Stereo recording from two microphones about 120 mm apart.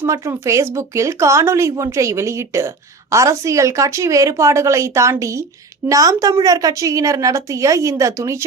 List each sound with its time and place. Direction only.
0.0 s speech: 25° right (ahead or behind)